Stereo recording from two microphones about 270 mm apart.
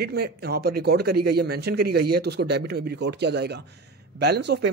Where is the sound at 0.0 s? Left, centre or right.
Right.